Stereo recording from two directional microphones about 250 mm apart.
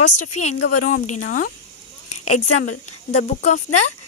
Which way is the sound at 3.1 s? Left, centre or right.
Left.